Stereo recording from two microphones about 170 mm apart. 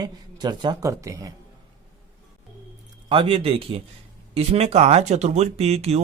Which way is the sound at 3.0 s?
30° right (ahead or behind).